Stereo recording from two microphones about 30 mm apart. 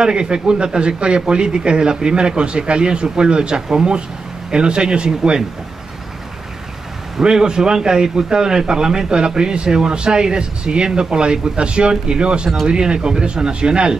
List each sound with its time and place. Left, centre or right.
0.0 s a man's voice: right
7.2 s a man's voice: right